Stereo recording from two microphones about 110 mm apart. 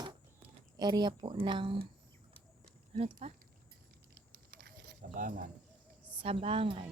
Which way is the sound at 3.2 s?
65° right (ahead or behind).